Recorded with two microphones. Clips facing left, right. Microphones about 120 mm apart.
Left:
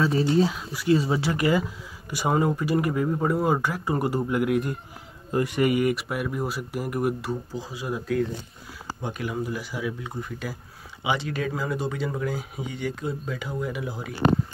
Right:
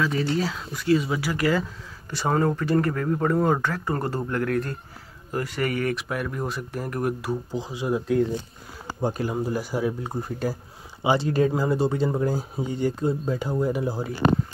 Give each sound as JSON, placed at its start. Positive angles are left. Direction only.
{"t": 0.0, "sound": "speech", "side_deg": 30}
{"t": 0.3, "sound": "speech", "side_deg": 20}
{"t": 0.8, "sound": "speech", "side_deg": 30}
{"t": 7.5, "sound": "speech", "side_deg": -25}
{"t": 9.0, "sound": "speech", "side_deg": -35}